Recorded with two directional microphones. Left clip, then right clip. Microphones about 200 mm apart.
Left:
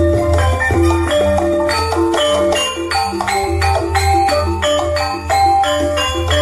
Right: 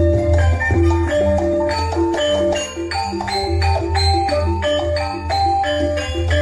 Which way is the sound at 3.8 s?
30° left (ahead or behind).